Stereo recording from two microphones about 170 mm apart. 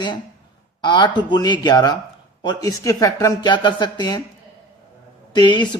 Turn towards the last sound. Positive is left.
turn(degrees=25)  # may be behind; listen again after turning